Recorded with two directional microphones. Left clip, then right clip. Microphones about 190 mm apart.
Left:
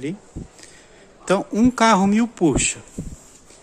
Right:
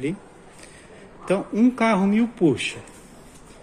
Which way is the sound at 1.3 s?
40° left (ahead or behind).